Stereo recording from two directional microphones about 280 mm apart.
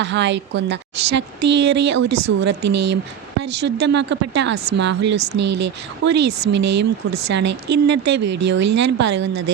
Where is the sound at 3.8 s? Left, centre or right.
Right.